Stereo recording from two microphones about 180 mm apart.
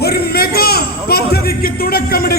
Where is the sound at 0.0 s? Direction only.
60° left (ahead or behind).